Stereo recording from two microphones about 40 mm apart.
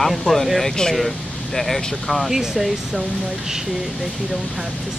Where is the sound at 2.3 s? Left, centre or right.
Centre.